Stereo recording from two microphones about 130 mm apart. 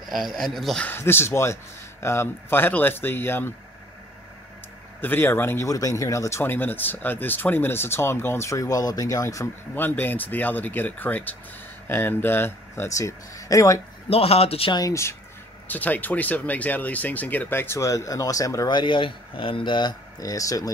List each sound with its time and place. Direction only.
0.0 s speech: centre (ahead or behind)
0.8 s speech: 15° left (ahead or behind)
5.0 s speech: 15° left (ahead or behind)
14.0 s speech: 50° left (ahead or behind)
14.7 s speech: 25° left (ahead or behind)